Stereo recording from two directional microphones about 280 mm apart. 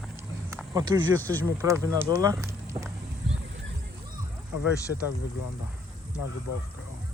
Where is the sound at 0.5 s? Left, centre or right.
Centre.